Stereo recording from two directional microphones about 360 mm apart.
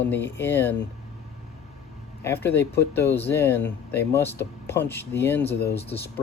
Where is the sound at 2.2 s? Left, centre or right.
Centre.